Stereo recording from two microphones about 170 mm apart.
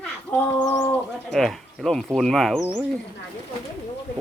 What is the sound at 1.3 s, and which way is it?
Speech, centre (ahead or behind).